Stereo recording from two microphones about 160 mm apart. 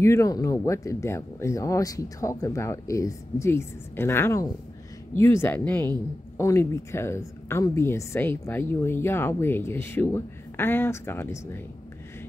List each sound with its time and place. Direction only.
0.0 s a woman's voice: 20° left (ahead or behind)